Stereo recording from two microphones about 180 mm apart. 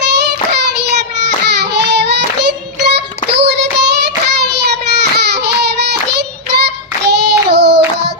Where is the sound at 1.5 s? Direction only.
70° right (ahead or behind).